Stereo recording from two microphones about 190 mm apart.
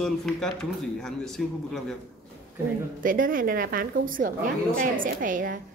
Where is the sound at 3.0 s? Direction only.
45° right (ahead or behind).